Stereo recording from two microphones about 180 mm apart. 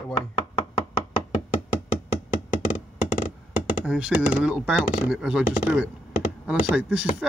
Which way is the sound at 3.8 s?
5° right (ahead or behind).